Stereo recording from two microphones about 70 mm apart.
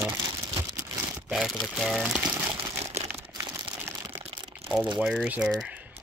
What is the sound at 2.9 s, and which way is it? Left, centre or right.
Crumpling, right.